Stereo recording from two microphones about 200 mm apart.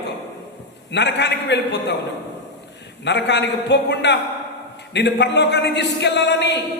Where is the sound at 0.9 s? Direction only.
60° left (ahead or behind).